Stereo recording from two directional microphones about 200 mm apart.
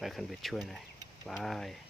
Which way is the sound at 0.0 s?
Centre (ahead or behind).